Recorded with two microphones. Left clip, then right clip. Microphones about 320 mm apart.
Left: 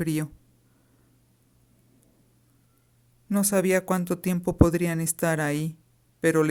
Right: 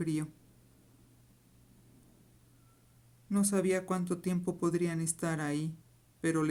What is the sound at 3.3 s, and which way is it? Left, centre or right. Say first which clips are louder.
Speech: left 8 dB; left.